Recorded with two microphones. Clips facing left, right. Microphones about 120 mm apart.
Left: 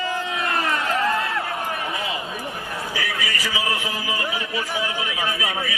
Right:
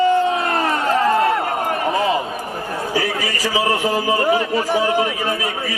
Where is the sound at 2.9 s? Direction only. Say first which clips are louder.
Right 7 dB; 30° right (ahead or behind).